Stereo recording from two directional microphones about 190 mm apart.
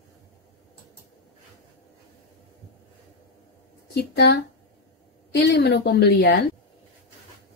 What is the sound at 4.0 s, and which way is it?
Speech, 60° left (ahead or behind).